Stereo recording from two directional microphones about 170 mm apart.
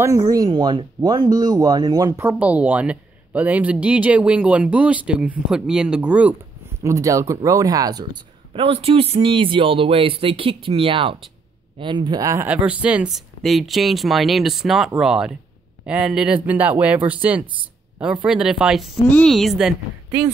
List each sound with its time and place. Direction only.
0.0 s speech: 20° right (ahead or behind)
6.8 s speech: 20° right (ahead or behind)
8.5 s speech: 35° right (ahead or behind); by 19.7 s centre (ahead or behind)